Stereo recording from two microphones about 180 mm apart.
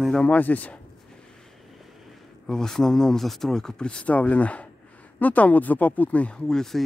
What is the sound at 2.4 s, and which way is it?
Speech, 5° left (ahead or behind).